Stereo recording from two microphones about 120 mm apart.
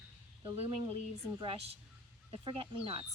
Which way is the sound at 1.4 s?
50° right (ahead or behind).